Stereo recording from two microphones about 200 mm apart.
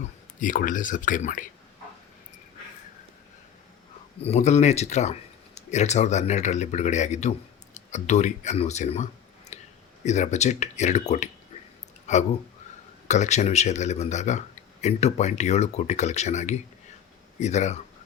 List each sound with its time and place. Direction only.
0.3 s a man's voice: 40° left (ahead or behind)
4.2 s a man's voice: 35° left (ahead or behind)
9.5 s a sound: 35° left (ahead or behind)
10.0 s a man's voice: 35° left (ahead or behind)